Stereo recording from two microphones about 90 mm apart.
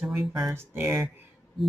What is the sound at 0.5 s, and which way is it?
Speech, 25° right (ahead or behind).